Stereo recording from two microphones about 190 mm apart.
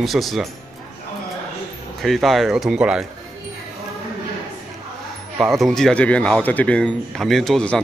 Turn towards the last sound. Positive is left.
turn(degrees=5)  # may be behind; listen again after turning